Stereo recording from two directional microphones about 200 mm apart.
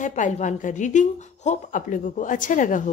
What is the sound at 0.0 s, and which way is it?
A woman's voice, 40° left (ahead or behind).